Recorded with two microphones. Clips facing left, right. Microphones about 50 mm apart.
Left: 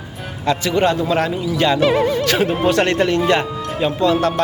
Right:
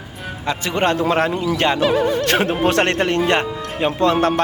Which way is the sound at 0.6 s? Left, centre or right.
Right.